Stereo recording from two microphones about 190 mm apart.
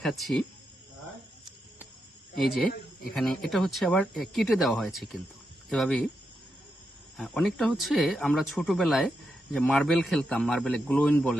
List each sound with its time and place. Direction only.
0.0 s speech: centre (ahead or behind)
3.1 s speech: centre (ahead or behind)
7.2 s speech: centre (ahead or behind)